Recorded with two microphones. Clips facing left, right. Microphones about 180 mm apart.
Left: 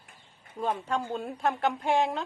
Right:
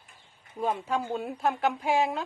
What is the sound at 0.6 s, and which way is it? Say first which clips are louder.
Speech: right 1 dB; 5° right (ahead or behind).